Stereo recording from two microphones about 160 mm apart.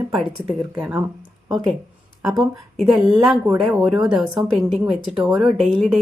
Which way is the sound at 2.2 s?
Centre (ahead or behind).